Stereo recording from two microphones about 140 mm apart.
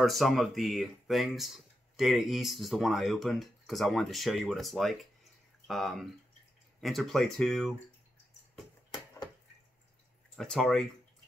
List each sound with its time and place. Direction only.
0.0 s speech: centre (ahead or behind)
8.9 s a sound: 25° left (ahead or behind)
10.3 s speech: 5° left (ahead or behind)